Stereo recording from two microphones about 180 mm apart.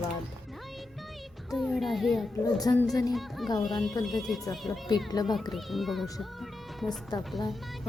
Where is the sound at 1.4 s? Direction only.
Centre (ahead or behind).